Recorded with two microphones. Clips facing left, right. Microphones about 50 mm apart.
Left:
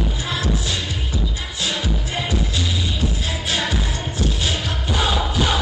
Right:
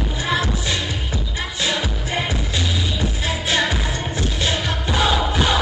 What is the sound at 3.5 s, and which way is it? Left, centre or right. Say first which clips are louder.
Music: right 3 dB; right.